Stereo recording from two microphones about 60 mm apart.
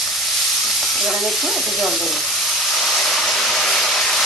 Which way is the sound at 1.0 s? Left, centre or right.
Centre.